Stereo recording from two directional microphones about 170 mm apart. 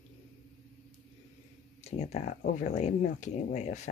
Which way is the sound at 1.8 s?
40° left (ahead or behind).